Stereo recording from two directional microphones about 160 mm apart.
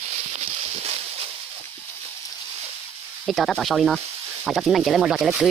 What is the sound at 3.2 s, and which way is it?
Speech, centre (ahead or behind).